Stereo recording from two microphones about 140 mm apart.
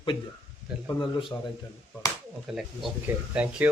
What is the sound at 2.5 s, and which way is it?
Speech, 5° right (ahead or behind).